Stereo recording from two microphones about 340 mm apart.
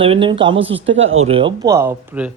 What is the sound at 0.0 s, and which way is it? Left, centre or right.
Speech, centre.